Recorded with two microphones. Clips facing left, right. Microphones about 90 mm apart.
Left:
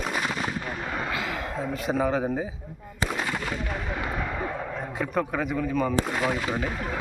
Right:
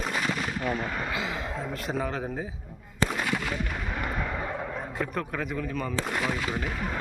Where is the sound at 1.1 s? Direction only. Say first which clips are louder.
Left 1 dB; 20° right (ahead or behind).